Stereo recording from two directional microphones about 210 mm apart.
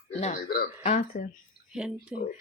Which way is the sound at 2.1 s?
45° left (ahead or behind).